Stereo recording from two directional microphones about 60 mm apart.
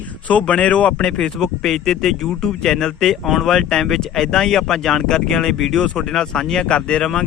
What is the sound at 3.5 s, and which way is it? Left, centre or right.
A man's voice, centre.